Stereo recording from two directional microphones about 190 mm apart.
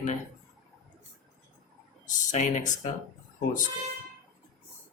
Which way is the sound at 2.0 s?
40° left (ahead or behind).